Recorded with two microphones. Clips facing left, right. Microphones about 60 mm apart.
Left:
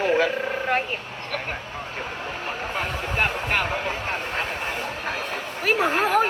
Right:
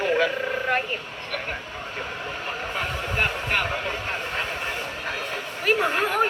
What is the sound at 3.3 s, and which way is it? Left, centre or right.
Speech, left.